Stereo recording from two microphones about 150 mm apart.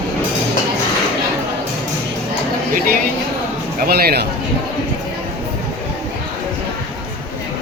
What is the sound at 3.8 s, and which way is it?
Speech, 90° right.